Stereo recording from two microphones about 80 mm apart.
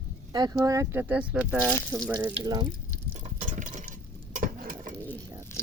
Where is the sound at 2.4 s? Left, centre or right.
Right.